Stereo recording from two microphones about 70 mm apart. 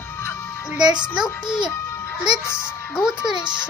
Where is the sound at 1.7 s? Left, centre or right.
Left.